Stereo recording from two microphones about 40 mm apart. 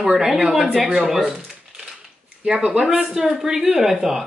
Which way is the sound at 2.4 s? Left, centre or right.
Right.